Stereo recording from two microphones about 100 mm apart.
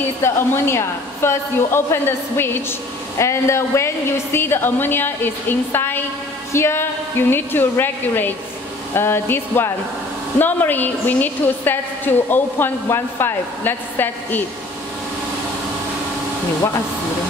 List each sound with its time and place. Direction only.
0.2 s a woman's voice: 25° left (ahead or behind)